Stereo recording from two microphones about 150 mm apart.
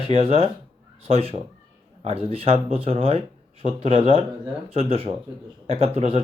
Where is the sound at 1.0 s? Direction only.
40° right (ahead or behind).